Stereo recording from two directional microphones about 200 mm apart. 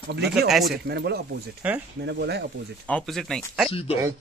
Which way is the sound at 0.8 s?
55° right (ahead or behind).